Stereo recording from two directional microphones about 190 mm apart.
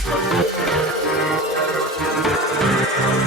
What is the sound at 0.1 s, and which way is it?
Music, centre (ahead or behind).